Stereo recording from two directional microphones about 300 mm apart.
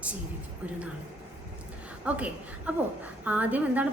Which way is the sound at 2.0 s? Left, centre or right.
Centre.